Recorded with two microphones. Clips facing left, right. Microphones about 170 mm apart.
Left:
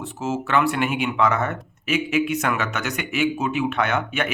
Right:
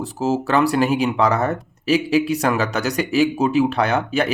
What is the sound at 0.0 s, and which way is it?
Speech, 35° right (ahead or behind).